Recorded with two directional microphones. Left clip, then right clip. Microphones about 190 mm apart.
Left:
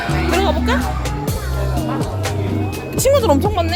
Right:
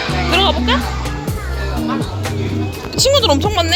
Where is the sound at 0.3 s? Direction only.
20° left (ahead or behind).